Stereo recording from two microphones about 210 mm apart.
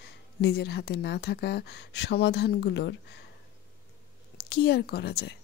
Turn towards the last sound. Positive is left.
turn(degrees=50)  # may be behind; listen again after turning